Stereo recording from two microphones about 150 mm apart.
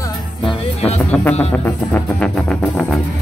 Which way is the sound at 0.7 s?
45° left (ahead or behind).